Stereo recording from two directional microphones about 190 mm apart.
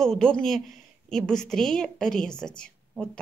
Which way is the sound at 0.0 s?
5° left (ahead or behind).